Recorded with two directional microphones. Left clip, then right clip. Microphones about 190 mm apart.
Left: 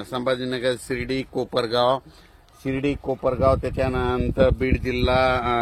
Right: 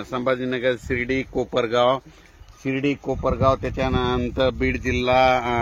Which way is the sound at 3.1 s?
40° right (ahead or behind).